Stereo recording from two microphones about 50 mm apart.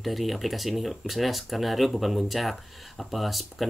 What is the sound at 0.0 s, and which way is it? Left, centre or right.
Speech, centre.